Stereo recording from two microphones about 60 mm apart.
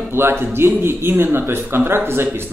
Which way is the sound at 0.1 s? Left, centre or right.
Right.